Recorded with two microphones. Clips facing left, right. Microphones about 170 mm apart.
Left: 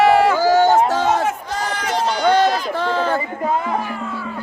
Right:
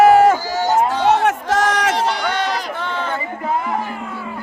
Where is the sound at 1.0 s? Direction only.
70° right (ahead or behind); by 1.9 s 90° right.